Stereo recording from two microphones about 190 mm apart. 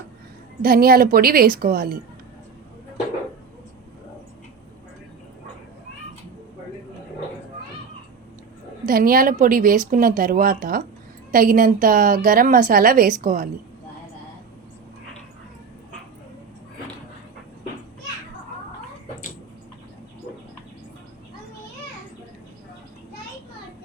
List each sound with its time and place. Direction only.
0.6 s a woman's voice: 50° right (ahead or behind)
8.9 s a woman's voice: 50° right (ahead or behind)